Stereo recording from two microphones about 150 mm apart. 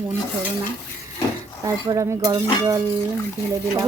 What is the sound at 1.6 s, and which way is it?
A woman's voice, 20° right (ahead or behind).